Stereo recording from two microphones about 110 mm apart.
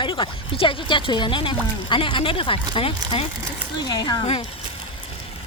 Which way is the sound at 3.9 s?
40° left (ahead or behind).